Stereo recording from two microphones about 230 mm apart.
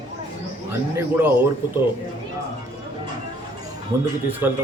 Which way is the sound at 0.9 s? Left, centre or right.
Centre.